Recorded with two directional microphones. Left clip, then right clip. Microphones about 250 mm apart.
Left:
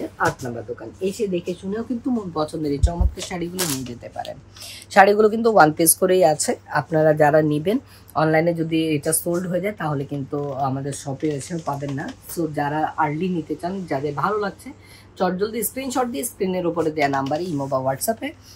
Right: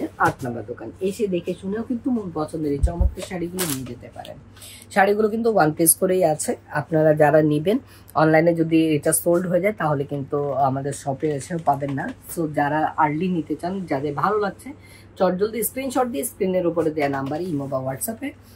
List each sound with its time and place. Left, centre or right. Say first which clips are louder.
1.0 s speech: even; centre
2.4 s speech: left 1 dB; centre
4.9 s speech: left 4 dB; left